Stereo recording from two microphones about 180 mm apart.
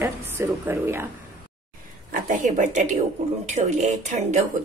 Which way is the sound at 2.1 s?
50° right (ahead or behind).